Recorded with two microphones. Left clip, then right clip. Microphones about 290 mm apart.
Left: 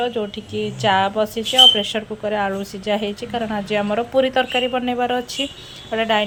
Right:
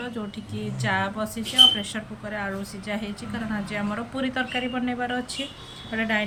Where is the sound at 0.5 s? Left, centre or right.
Centre.